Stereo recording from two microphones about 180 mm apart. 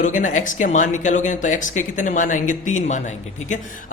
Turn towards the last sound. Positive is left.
turn(degrees=40)  # may be behind; listen again after turning